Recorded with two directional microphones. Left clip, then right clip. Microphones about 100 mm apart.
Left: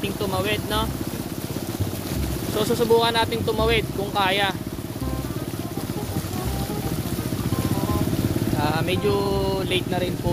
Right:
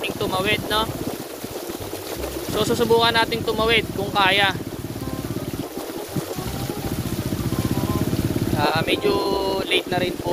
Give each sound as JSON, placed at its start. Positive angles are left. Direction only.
{"t": 0.0, "sound": "speech", "side_deg": 0}
{"t": 2.5, "sound": "speech", "side_deg": 15}
{"t": 3.4, "sound": "speech", "side_deg": 25}
{"t": 4.1, "sound": "speech", "side_deg": 10}
{"t": 8.5, "sound": "speech", "side_deg": 0}
{"t": 9.8, "sound": "speech", "side_deg": -20}